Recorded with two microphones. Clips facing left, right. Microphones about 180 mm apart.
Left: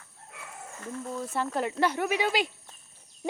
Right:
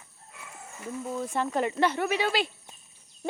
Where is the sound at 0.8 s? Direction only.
10° right (ahead or behind).